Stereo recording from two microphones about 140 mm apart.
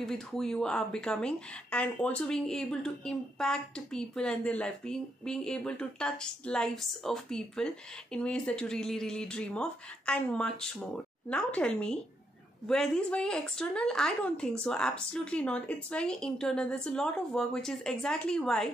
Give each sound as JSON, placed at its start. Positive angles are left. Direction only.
{"t": 0.0, "sound": "a woman's voice", "side_deg": 5}